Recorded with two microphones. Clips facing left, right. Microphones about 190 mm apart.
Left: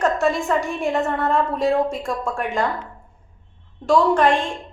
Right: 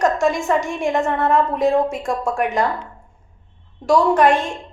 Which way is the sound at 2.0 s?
20° right (ahead or behind).